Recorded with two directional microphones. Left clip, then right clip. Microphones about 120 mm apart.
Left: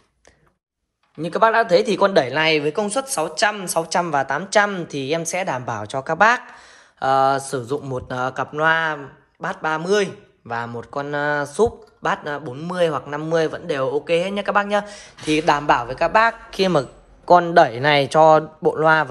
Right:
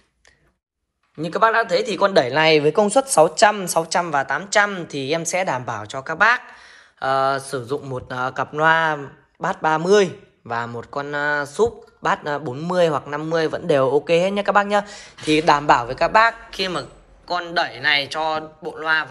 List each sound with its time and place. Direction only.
1.2 s speech: 30° left (ahead or behind)
2.2 s speech: 15° left (ahead or behind)
3.8 s speech: 30° left (ahead or behind)
13.5 s speech: 5° left (ahead or behind); by 16.3 s 25° left (ahead or behind)
16.4 s a man's voice: 50° left (ahead or behind)
17.3 s speech: 90° left
18.8 s a man's voice: 70° left (ahead or behind)